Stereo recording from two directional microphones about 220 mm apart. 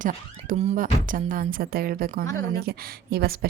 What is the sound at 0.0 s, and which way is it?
A woman's voice, 35° right (ahead or behind).